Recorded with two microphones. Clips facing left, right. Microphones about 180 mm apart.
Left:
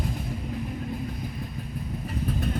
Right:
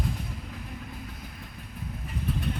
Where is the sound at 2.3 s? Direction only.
40° left (ahead or behind).